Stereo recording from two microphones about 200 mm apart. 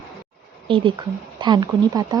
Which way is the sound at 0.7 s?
25° right (ahead or behind).